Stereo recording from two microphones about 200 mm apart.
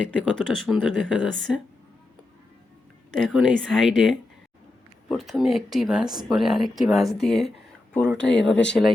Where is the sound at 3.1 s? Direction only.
5° left (ahead or behind).